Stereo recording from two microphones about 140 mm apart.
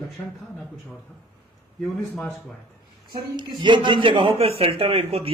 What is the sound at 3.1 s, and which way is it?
A man's voice, 30° right (ahead or behind).